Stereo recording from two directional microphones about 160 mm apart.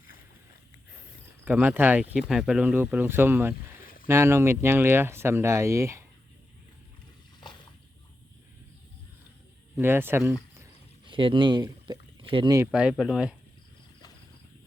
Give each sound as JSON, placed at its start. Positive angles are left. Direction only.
{"t": 1.5, "sound": "speech", "side_deg": -10}
{"t": 9.7, "sound": "speech", "side_deg": -15}
{"t": 11.0, "sound": "speech", "side_deg": -30}
{"t": 12.9, "sound": "speech", "side_deg": 0}